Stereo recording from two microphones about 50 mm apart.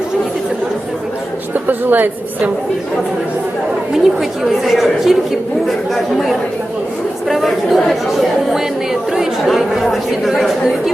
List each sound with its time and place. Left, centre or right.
1.5 s a woman's voice: right
3.9 s speech: centre
8.5 s speech: centre